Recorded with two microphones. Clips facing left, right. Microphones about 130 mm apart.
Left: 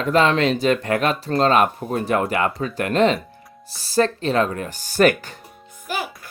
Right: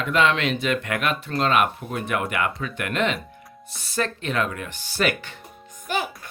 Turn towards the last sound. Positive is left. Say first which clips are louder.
# right 1 dB
turn(degrees=5)  # may be behind; listen again after turning